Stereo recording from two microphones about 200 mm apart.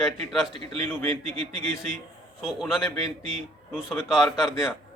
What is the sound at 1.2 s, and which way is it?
Speech, 30° right (ahead or behind).